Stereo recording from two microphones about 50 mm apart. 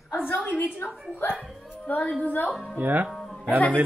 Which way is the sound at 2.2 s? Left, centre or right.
Left.